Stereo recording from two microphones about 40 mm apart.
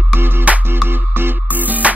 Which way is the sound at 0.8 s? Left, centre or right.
Right.